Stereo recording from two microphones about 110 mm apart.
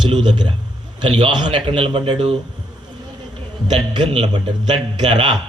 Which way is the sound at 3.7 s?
40° right (ahead or behind).